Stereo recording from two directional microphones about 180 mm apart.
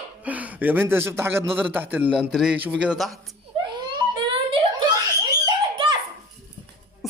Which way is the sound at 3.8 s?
25° right (ahead or behind).